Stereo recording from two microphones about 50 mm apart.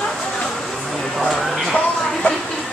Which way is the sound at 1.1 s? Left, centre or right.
Centre.